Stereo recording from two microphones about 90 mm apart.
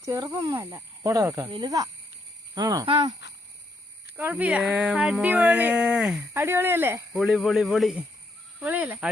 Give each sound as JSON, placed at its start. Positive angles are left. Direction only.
{"t": 0.0, "sound": "speech", "side_deg": -35}
{"t": 1.5, "sound": "speech", "side_deg": -65}
{"t": 2.6, "sound": "speech", "side_deg": -40}
{"t": 2.8, "sound": "speech", "side_deg": -70}
{"t": 4.2, "sound": "speech", "side_deg": -20}
{"t": 6.3, "sound": "speech", "side_deg": -25}
{"t": 7.1, "sound": "speech", "side_deg": -5}
{"t": 8.5, "sound": "speech", "side_deg": -20}